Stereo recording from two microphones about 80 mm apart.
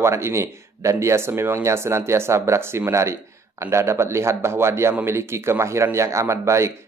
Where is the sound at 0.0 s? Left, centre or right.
Right.